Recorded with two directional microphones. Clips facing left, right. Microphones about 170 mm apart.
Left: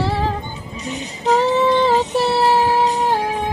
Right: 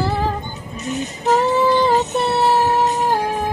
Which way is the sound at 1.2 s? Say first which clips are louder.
Left 1 dB; centre (ahead or behind).